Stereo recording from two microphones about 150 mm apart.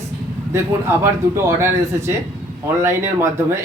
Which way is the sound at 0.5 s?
15° right (ahead or behind).